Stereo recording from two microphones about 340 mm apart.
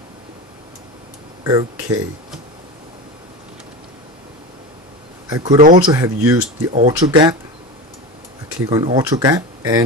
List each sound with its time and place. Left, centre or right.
1.4 s speech: centre
5.3 s speech: centre
5.6 s speech: right
5.9 s speech: centre
8.6 s speech: centre